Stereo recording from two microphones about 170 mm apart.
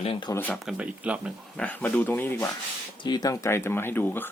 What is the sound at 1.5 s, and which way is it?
Speech, 10° left (ahead or behind).